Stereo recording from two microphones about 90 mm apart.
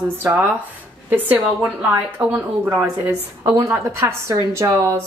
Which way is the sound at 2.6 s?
30° right (ahead or behind).